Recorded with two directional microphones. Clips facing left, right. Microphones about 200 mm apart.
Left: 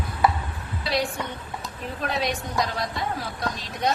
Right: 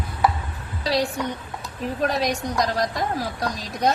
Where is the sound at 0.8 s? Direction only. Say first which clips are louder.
Right 4 dB; 35° right (ahead or behind).